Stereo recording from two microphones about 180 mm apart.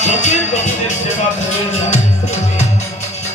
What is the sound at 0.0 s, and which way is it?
Music, 40° left (ahead or behind).